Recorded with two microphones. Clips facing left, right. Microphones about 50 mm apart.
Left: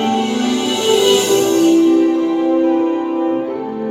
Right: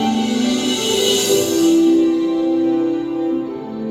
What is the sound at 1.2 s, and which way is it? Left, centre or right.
Music, left.